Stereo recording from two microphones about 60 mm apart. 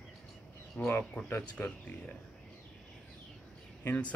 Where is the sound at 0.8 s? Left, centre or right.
Left.